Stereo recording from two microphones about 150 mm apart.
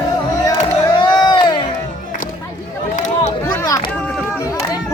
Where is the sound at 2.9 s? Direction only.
55° left (ahead or behind).